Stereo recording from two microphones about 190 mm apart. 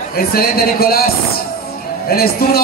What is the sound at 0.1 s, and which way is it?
Speech, 55° left (ahead or behind).